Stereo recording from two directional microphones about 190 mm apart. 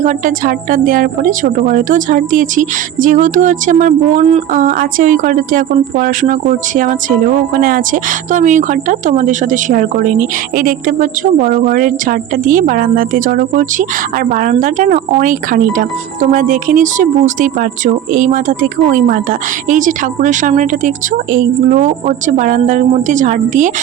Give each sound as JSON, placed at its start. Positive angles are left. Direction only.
{"t": 0.0, "sound": "speech", "side_deg": -40}
{"t": 7.5, "sound": "speech", "side_deg": -45}